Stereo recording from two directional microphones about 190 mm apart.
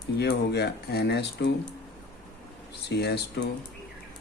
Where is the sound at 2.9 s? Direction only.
60° left (ahead or behind).